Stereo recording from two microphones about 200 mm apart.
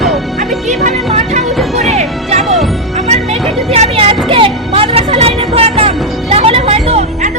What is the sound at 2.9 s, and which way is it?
Music, 35° right (ahead or behind).